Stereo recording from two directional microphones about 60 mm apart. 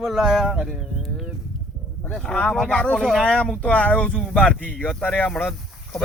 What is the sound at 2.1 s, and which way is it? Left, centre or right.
Speech, centre.